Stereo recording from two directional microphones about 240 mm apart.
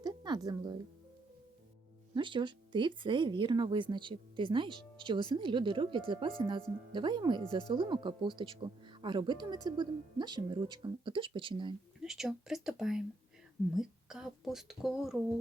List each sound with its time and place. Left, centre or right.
0.0 s music: centre
2.1 s speech: centre
11.9 s speech: centre